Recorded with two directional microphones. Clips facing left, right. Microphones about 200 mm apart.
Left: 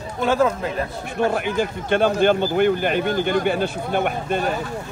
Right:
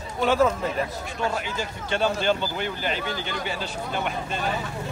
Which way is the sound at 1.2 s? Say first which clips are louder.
Left 8 dB; 55° left (ahead or behind).